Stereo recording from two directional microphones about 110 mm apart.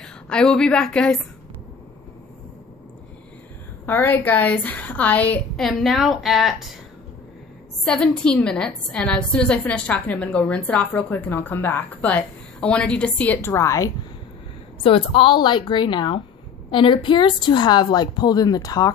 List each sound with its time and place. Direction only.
0.0 s a woman's voice: 5° left (ahead or behind)
3.8 s a woman's voice: 15° left (ahead or behind)
5.6 s a woman's voice: centre (ahead or behind)
7.8 s a woman's voice: 5° left (ahead or behind); by 13.8 s 25° left (ahead or behind)
14.8 s a woman's voice: 55° left (ahead or behind); by 18.9 s 35° left (ahead or behind)